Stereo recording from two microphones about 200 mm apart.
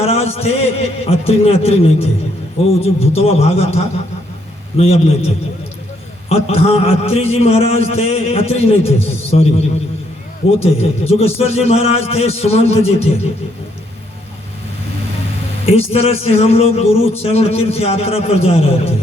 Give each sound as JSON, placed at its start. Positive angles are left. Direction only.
{"t": 0.0, "sound": "a man's voice", "side_deg": 30}
{"t": 15.6, "sound": "a man's voice", "side_deg": 30}